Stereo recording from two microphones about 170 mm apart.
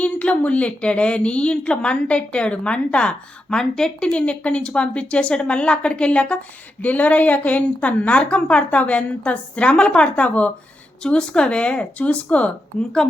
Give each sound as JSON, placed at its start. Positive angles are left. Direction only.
{"t": 0.0, "sound": "a woman's voice", "side_deg": 10}